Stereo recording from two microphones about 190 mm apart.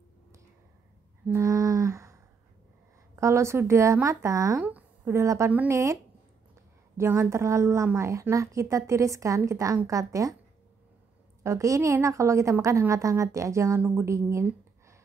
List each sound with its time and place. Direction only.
1.2 s a sound: 15° right (ahead or behind)
3.2 s a woman's voice: 15° right (ahead or behind)
11.4 s a woman's voice: 15° right (ahead or behind)